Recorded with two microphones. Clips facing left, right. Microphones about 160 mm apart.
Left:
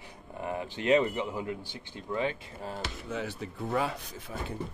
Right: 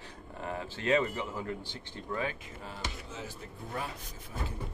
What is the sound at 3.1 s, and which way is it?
Speech, 70° left (ahead or behind).